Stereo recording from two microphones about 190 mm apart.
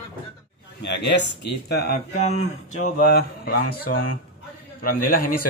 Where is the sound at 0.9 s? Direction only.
65° left (ahead or behind).